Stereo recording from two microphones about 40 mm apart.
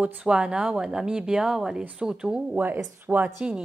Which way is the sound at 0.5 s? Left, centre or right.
Centre.